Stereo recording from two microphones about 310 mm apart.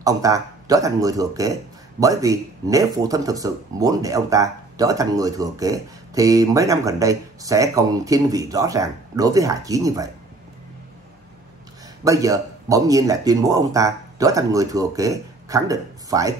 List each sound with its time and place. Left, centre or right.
0.0 s speech: centre
12.0 s speech: centre